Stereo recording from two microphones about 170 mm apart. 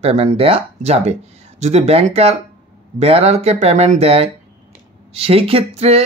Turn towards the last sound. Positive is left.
turn(degrees=-35)  # may be behind; listen again after turning